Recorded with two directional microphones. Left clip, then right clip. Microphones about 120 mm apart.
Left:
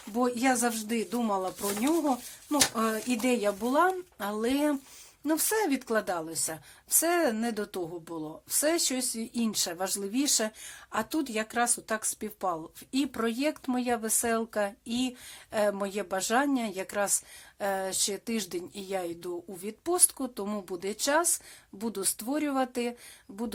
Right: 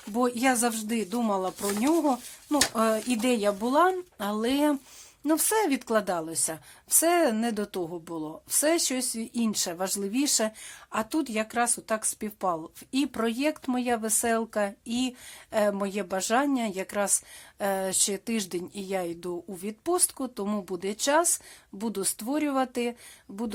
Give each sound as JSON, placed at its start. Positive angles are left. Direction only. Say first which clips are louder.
{"t": 0.1, "sound": "speech", "louder": "right 2 dB", "side_deg": -35}